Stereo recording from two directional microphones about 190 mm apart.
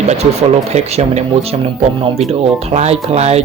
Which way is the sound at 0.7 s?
35° right (ahead or behind).